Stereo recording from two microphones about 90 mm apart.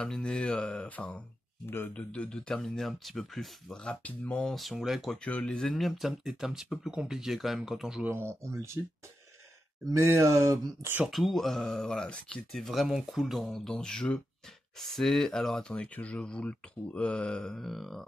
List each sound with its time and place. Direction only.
0.0 s speech: 10° left (ahead or behind)
5.2 s speech: 10° left (ahead or behind)
8.5 s speech: 30° right (ahead or behind)
9.9 s speech: 30° right (ahead or behind)
11.1 s speech: centre (ahead or behind)